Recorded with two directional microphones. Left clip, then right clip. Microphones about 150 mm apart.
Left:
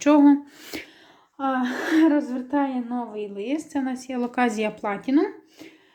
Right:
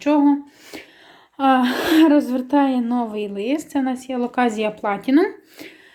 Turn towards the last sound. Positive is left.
turn(degrees=-25)  # may be behind; listen again after turning